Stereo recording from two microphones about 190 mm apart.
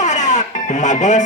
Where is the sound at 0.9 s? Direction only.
40° left (ahead or behind).